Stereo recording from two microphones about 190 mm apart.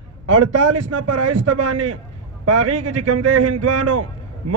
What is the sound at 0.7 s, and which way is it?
Speech, 90° right.